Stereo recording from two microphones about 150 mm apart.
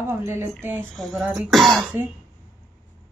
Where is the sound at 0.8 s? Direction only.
Centre (ahead or behind).